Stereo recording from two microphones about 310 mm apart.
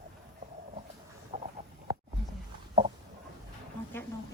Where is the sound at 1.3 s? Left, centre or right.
Centre.